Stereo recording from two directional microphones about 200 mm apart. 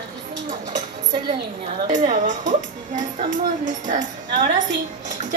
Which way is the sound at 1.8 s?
40° right (ahead or behind).